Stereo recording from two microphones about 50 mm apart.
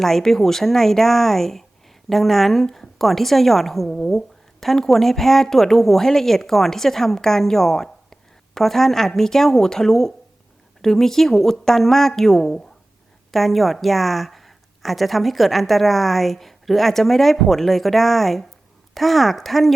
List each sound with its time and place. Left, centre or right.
0.0 s a woman's voice: centre